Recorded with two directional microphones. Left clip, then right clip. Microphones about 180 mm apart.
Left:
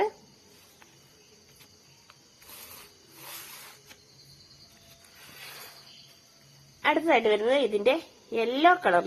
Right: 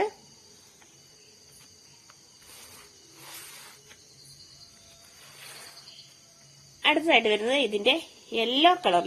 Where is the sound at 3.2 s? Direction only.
35° left (ahead or behind).